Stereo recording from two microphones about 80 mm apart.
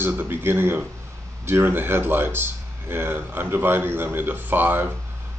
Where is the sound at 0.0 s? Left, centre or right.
Right.